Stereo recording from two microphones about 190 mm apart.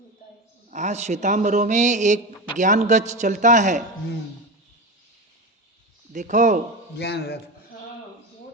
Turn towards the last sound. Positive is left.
turn(degrees=60)  # may be behind; listen again after turning